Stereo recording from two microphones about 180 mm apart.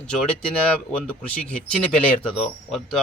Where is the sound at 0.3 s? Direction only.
5° left (ahead or behind).